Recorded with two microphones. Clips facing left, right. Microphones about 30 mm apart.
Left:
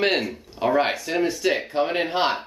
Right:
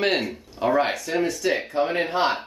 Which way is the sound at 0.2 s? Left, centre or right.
Centre.